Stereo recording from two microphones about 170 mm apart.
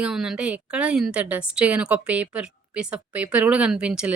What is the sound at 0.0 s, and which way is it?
A woman's voice, 5° right (ahead or behind).